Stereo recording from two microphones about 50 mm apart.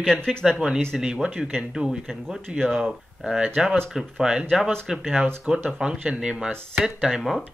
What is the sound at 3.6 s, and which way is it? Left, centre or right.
Speech, centre.